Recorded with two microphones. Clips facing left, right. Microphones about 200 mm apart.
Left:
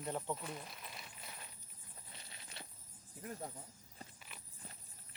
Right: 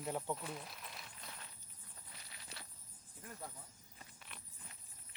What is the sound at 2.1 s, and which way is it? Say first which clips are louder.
Walk: even; 25° left (ahead or behind).